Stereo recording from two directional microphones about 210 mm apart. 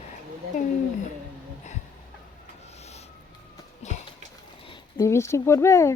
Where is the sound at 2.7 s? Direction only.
30° left (ahead or behind).